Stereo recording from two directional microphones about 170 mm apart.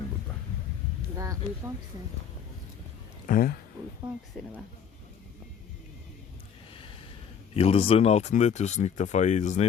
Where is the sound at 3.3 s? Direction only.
55° left (ahead or behind).